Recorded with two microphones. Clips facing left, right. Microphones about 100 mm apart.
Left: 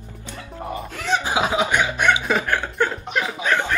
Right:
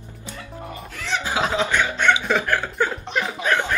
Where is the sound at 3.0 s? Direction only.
5° left (ahead or behind).